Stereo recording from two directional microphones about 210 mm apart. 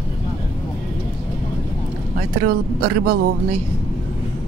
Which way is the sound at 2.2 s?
45° right (ahead or behind).